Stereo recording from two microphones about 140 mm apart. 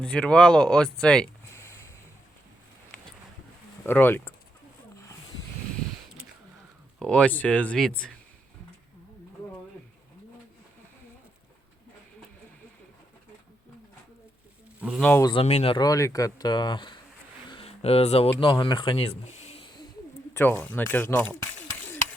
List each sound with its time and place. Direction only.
0.0 s speech: 10° left (ahead or behind)
1.5 s a sound: 20° left (ahead or behind)
3.8 s speech: 15° left (ahead or behind)
7.0 s speech: 5° left (ahead or behind)
14.8 s speech: 10° right (ahead or behind)
15.2 s speech: 35° left (ahead or behind)
15.4 s speech: 45° left (ahead or behind)
15.8 s speech: 25° left (ahead or behind)
17.5 s a sound: 45° left (ahead or behind)
18.3 s speech: 35° left (ahead or behind)
20.3 s speech: 15° left (ahead or behind)